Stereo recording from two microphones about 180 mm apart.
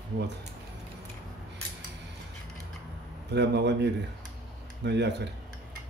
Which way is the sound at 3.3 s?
70° right (ahead or behind).